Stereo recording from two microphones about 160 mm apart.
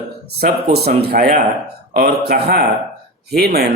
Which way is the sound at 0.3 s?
85° right.